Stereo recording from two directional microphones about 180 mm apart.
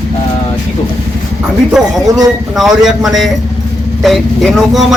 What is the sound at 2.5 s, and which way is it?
Speech, centre (ahead or behind).